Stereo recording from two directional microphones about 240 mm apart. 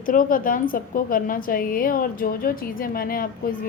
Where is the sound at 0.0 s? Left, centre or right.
Left.